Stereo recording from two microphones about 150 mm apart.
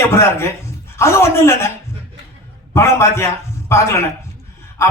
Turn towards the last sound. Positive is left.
turn(degrees=15)  # may be behind; listen again after turning